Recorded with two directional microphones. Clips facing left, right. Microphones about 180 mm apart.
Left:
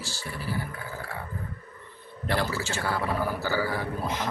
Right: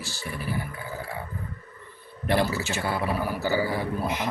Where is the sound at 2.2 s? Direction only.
20° right (ahead or behind).